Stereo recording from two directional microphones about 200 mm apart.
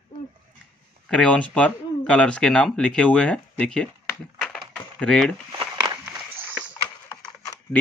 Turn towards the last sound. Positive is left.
turn(degrees=15)  # may be behind; listen again after turning